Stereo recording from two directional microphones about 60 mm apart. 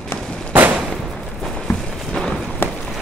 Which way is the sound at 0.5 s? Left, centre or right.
Right.